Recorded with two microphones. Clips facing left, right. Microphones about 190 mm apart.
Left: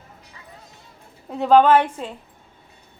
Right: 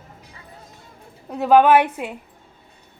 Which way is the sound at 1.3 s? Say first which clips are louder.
Right 1 dB; 5° right (ahead or behind).